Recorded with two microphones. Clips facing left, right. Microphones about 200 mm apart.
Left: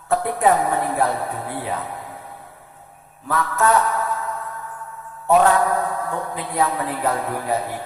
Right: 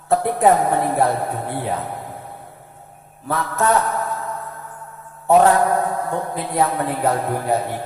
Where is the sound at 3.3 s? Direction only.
30° right (ahead or behind).